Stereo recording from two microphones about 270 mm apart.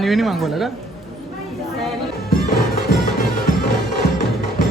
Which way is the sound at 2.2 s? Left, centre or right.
Left.